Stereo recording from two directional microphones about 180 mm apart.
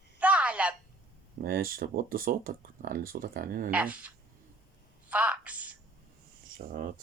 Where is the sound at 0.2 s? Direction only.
5° right (ahead or behind).